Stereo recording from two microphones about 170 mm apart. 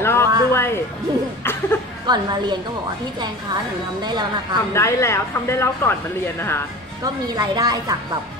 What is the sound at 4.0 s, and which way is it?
Speech, 25° right (ahead or behind).